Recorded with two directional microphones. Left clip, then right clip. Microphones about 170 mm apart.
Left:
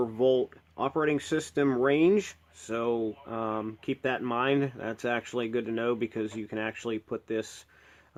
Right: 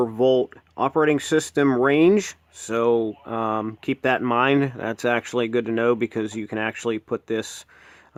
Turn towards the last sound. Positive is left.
turn(degrees=-40)  # may be behind; listen again after turning